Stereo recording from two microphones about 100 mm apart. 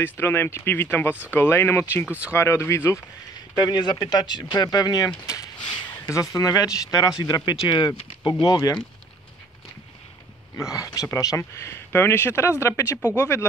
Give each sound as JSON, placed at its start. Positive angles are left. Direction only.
{"t": 0.0, "sound": "speech", "side_deg": 20}
{"t": 2.0, "sound": "speech", "side_deg": -15}
{"t": 2.3, "sound": "speech", "side_deg": 25}
{"t": 3.5, "sound": "speech", "side_deg": 40}
{"t": 10.6, "sound": "speech", "side_deg": 35}